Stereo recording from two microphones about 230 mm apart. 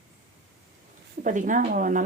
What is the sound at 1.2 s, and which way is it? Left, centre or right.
Speech, right.